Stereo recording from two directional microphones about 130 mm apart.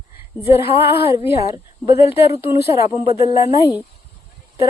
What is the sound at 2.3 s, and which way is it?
Speech, 20° right (ahead or behind).